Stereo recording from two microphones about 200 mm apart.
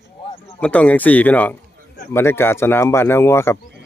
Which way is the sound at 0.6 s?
5° left (ahead or behind).